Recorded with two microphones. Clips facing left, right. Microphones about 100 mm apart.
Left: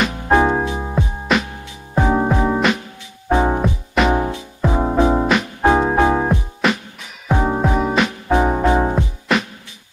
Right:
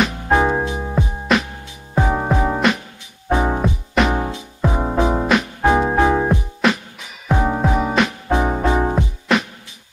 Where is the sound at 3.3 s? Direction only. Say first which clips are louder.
Left 2 dB; 20° left (ahead or behind).